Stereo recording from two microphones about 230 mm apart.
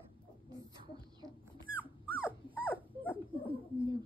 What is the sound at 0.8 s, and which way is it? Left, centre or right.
Rodents, centre.